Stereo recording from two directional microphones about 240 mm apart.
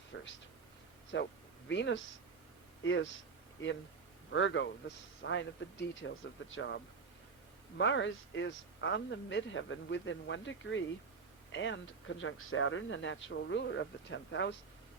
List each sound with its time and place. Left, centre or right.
0.1 s speech: left